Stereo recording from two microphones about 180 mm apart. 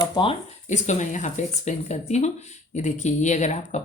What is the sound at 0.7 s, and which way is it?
Speech, 40° left (ahead or behind).